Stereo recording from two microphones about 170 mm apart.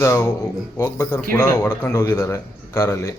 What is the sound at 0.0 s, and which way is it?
A man's voice, 15° left (ahead or behind).